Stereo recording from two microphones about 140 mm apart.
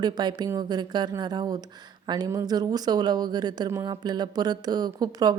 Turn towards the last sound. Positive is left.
turn(degrees=-30)  # may be behind; listen again after turning